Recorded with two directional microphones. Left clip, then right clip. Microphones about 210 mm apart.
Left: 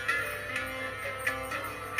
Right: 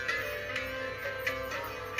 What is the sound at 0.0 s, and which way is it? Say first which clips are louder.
Music: left 2 dB; centre (ahead or behind).